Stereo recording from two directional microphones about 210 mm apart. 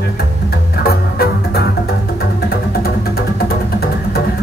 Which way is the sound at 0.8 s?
50° left (ahead or behind).